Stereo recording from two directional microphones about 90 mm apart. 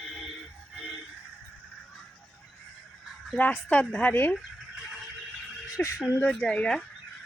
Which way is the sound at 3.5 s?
10° left (ahead or behind).